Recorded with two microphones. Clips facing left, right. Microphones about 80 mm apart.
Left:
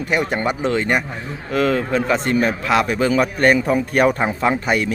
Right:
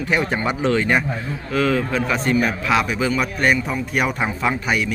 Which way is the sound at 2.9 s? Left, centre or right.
Left.